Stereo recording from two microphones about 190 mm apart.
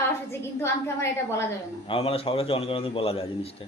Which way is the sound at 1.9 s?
30° left (ahead or behind).